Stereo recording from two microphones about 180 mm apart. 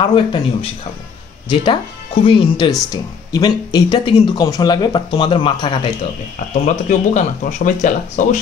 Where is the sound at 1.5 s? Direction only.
25° left (ahead or behind).